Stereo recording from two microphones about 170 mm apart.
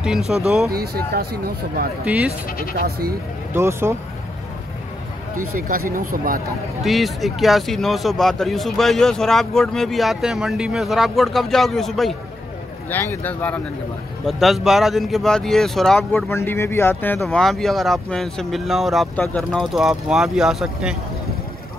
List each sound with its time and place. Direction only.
0.0 s speech: 5° right (ahead or behind)
0.7 s speech: 60° right (ahead or behind)
2.0 s speech: 10° right (ahead or behind)
2.8 s speech: 60° right (ahead or behind)
3.5 s speech: 15° right (ahead or behind)
5.3 s speech: 55° right (ahead or behind)
6.8 s speech: centre (ahead or behind)
12.9 s speech: 15° left (ahead or behind)
16.3 s speech: 15° left (ahead or behind)
17.2 s speech: centre (ahead or behind)